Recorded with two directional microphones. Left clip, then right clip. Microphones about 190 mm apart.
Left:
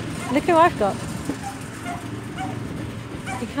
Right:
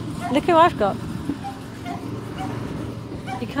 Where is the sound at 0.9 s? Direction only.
40° left (ahead or behind).